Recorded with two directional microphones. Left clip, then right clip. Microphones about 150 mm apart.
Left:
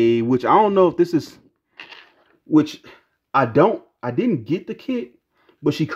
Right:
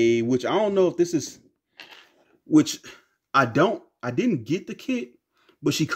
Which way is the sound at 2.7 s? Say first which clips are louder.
Right 3 dB; 10° left (ahead or behind).